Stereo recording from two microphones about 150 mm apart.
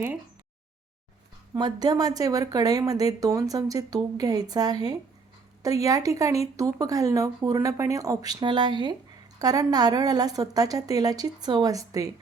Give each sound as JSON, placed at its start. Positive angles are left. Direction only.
{"t": 1.5, "sound": "speech", "side_deg": -25}